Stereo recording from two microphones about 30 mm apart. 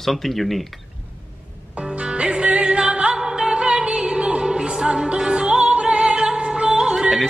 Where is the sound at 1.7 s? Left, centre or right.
Right.